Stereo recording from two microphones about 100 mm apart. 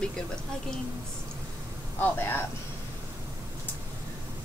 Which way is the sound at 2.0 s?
20° left (ahead or behind).